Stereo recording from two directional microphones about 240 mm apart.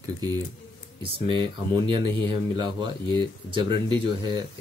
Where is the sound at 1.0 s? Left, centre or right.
Right.